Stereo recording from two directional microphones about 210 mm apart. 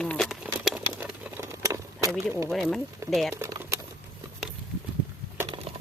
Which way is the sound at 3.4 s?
15° right (ahead or behind).